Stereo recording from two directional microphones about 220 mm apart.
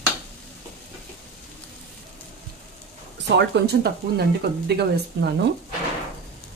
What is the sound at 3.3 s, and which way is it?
Speech, 50° right (ahead or behind).